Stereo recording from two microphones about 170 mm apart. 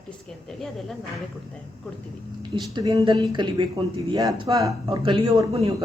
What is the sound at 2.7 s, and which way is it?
Speech, 25° right (ahead or behind).